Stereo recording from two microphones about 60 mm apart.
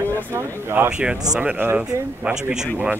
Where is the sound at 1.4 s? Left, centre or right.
Right.